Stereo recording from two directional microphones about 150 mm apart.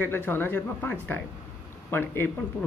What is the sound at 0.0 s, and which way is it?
Speech, 10° left (ahead or behind).